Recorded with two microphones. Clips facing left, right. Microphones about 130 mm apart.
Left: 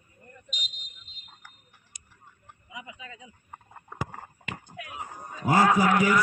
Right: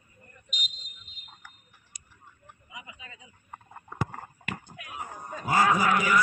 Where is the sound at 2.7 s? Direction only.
85° left.